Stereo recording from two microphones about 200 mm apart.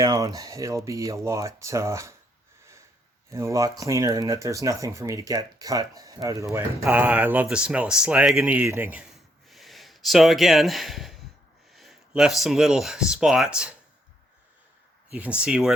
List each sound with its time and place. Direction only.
0.0 s speech: 20° right (ahead or behind)
3.2 s speech: 15° right (ahead or behind)
15.1 s speech: 5° right (ahead or behind)